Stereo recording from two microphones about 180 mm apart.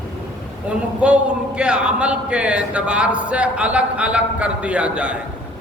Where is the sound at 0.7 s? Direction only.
5° right (ahead or behind).